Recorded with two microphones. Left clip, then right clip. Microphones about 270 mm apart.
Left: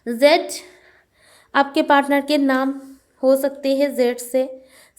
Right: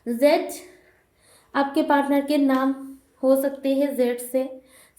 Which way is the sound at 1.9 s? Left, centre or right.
Left.